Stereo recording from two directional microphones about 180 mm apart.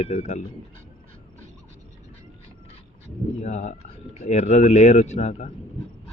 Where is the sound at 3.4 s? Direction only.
40° left (ahead or behind).